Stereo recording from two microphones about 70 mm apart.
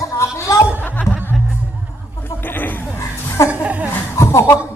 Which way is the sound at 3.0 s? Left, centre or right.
Left.